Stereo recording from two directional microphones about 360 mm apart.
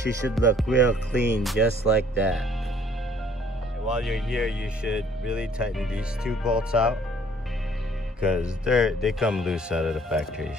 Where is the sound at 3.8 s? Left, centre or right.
Centre.